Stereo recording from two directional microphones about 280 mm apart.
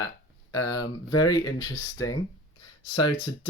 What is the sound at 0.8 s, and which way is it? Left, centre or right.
Speech, left.